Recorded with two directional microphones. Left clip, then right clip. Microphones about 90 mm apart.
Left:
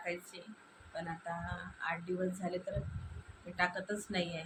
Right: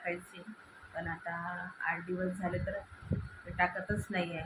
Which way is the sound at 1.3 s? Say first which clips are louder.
Right 1 dB; centre (ahead or behind).